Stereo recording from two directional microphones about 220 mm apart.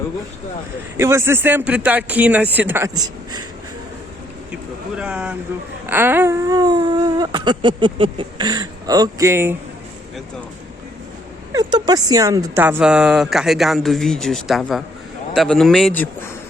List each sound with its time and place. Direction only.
0.9 s speech: 10° right (ahead or behind)
4.9 s a woman's voice: 5° right (ahead or behind)
11.5 s a woman's voice: 15° right (ahead or behind); by 16.0 s 5° left (ahead or behind)